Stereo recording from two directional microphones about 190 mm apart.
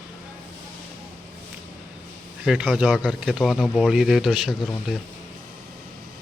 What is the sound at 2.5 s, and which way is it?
Speech, 5° right (ahead or behind).